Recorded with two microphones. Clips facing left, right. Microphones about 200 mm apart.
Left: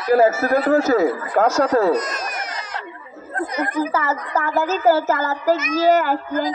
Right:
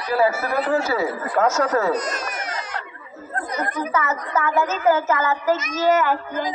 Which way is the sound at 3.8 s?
30° left (ahead or behind).